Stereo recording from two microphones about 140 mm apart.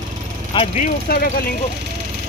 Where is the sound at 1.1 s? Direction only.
90° left.